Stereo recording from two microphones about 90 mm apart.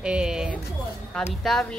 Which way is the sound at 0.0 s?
10° right (ahead or behind).